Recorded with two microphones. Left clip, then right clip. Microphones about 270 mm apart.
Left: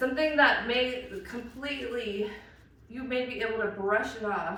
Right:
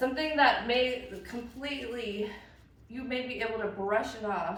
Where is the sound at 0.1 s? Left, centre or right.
Centre.